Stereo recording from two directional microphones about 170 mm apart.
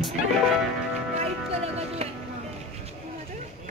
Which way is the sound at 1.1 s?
40° right (ahead or behind).